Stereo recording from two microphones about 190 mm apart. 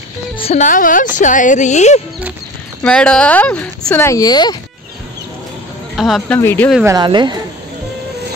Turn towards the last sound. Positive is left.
turn(degrees=-25)  # may be behind; listen again after turning